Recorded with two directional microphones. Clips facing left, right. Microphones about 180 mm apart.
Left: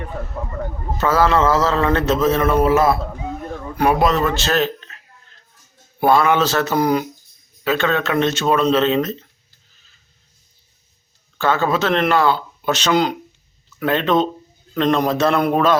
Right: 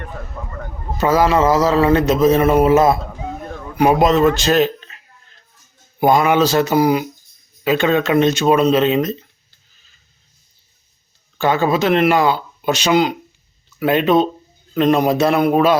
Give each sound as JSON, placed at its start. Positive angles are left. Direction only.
{"t": 0.9, "sound": "a man's voice", "side_deg": -15}
{"t": 6.0, "sound": "a man's voice", "side_deg": -15}
{"t": 11.3, "sound": "a man's voice", "side_deg": -15}